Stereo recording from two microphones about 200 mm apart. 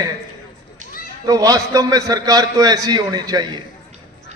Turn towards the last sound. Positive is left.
turn(degrees=-20)  # may be behind; listen again after turning